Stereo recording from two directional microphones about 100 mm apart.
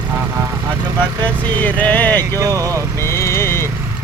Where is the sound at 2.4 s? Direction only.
35° right (ahead or behind).